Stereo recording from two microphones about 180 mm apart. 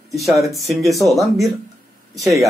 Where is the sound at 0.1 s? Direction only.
Centre (ahead or behind).